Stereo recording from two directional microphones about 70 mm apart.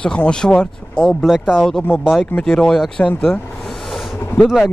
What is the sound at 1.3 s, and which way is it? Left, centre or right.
Speech, centre.